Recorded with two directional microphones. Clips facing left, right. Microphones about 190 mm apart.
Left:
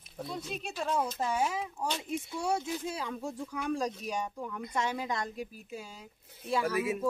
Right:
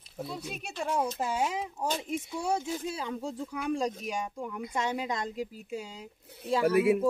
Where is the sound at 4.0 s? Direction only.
15° right (ahead or behind).